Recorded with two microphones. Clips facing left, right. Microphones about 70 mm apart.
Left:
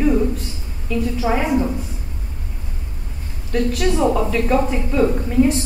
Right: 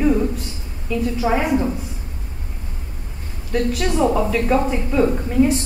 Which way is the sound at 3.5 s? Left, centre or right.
Centre.